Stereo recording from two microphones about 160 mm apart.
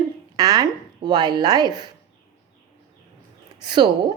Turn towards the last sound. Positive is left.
turn(degrees=-30)  # may be behind; listen again after turning